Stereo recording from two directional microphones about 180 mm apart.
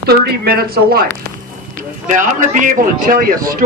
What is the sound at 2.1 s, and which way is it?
A man's voice, 45° right (ahead or behind).